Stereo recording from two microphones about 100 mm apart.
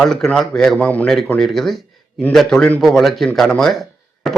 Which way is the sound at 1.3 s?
5° left (ahead or behind).